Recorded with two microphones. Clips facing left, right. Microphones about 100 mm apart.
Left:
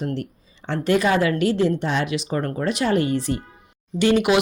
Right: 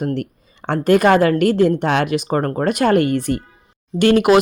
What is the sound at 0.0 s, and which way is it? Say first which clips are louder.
A woman's voice: right 5 dB; 55° right (ahead or behind).